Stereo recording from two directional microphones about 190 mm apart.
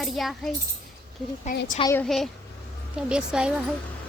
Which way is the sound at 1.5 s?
40° left (ahead or behind).